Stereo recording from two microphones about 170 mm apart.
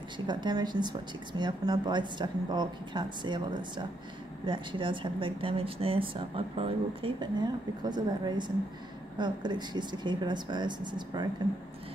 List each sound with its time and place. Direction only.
0.3 s a woman's voice: 25° right (ahead or behind)